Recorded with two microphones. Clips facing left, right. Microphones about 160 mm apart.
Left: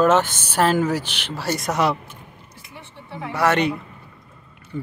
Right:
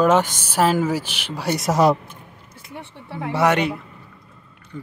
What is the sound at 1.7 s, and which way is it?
Speech, 40° right (ahead or behind).